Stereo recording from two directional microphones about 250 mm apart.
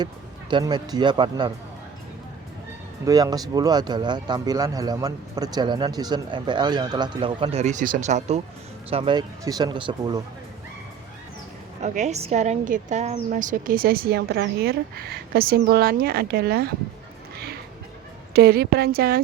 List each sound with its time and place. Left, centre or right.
0.5 s speech: centre
3.1 s speech: centre
11.8 s a woman's voice: right
17.3 s music: right
18.3 s a woman's voice: right